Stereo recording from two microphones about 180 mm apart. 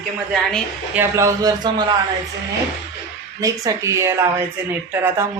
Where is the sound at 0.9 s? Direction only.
15° right (ahead or behind).